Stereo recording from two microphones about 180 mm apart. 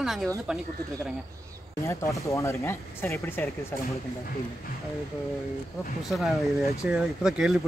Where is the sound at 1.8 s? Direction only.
15° left (ahead or behind).